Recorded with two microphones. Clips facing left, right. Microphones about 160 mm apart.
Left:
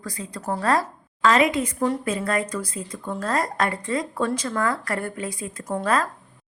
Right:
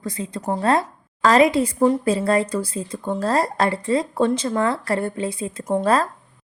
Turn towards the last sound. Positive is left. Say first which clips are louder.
# right 4 dB
turn(degrees=-25)  # may be behind; listen again after turning